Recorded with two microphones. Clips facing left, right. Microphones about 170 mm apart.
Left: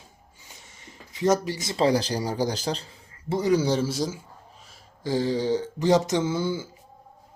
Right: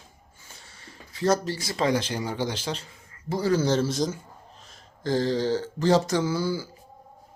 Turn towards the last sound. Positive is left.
turn(degrees=20)  # may be behind; listen again after turning